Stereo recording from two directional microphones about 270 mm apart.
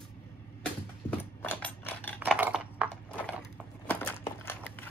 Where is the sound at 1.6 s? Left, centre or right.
Centre.